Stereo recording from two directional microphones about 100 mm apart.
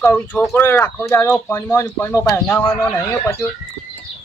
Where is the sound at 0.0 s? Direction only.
20° left (ahead or behind).